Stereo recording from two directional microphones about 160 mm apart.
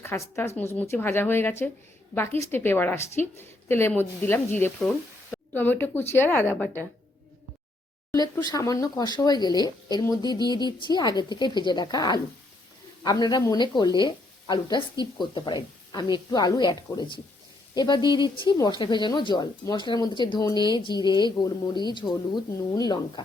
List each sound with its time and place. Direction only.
0.0 s a woman's voice: 15° left (ahead or behind)
4.9 s a sound: 10° left (ahead or behind)
5.8 s a woman's voice: 15° left (ahead or behind)
8.1 s speech: 25° left (ahead or behind)